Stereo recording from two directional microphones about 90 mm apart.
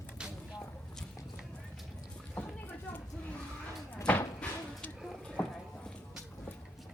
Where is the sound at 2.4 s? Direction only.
15° left (ahead or behind).